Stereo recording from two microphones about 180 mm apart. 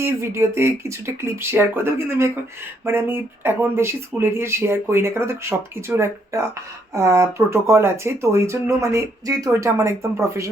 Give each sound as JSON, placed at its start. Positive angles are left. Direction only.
{"t": 0.0, "sound": "speech", "side_deg": -15}